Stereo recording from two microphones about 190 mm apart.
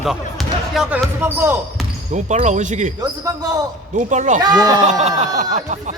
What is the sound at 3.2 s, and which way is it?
Speech, 20° right (ahead or behind).